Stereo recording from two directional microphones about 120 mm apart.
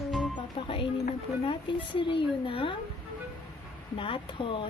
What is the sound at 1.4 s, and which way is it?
Speech, 45° left (ahead or behind).